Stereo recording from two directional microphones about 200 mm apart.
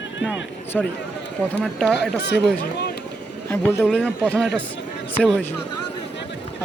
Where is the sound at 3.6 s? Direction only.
10° left (ahead or behind).